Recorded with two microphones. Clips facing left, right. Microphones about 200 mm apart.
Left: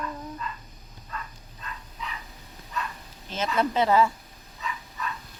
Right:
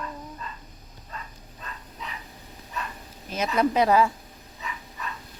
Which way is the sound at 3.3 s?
15° right (ahead or behind).